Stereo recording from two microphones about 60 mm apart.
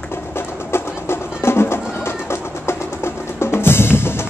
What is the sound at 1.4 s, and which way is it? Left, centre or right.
Music, left.